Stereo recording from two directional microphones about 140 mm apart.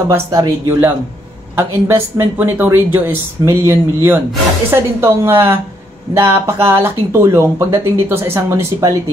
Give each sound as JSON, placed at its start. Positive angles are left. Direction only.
{"t": 0.3, "sound": "speech", "side_deg": -30}